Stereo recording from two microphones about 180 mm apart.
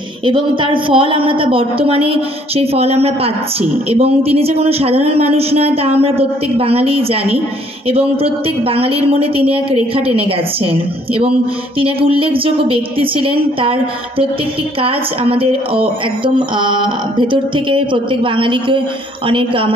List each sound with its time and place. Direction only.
0.2 s speech: 25° right (ahead or behind)